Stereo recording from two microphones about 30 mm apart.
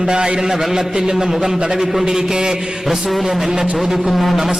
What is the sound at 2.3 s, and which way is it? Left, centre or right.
Speech, right.